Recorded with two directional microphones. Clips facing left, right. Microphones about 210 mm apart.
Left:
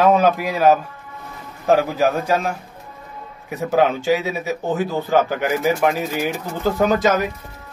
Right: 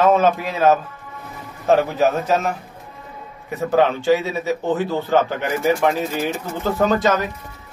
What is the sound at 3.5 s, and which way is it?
Speech, 15° left (ahead or behind).